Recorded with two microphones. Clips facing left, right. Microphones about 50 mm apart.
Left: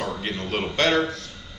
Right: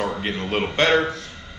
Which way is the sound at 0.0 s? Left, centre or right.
Centre.